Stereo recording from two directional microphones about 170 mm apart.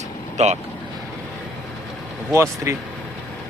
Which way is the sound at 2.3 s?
15° right (ahead or behind).